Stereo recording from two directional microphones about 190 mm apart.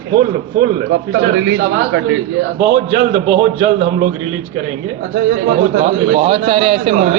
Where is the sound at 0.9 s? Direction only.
90° right.